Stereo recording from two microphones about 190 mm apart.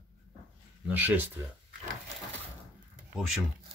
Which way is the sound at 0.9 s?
10° right (ahead or behind).